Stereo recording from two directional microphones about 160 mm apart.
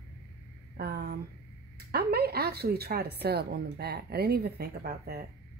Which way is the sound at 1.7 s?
80° right.